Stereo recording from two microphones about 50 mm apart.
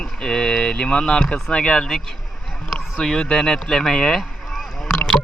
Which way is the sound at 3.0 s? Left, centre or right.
Centre.